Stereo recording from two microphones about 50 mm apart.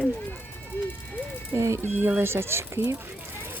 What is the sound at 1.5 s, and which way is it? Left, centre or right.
Speech, right.